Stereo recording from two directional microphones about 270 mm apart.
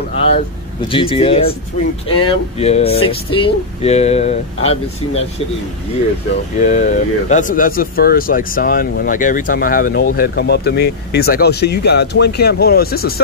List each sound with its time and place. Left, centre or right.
0.3 s speech: centre
6.6 s speech: left